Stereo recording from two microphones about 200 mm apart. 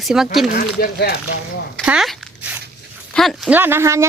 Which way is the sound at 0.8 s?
55° left (ahead or behind).